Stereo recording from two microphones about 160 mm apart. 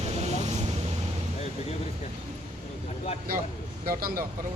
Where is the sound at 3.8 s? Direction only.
65° right (ahead or behind).